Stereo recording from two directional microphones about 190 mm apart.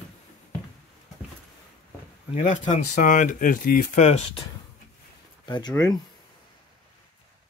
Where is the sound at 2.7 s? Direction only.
40° left (ahead or behind).